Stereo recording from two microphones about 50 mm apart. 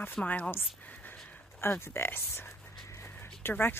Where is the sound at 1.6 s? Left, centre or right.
Left.